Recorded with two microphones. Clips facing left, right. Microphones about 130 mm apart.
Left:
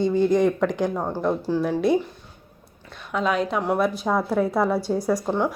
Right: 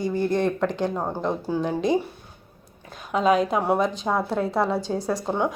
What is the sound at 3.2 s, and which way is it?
Speech, 40° right (ahead or behind).